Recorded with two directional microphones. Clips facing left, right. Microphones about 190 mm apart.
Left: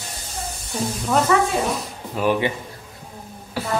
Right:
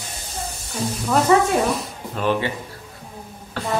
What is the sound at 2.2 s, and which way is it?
Speech, 15° left (ahead or behind).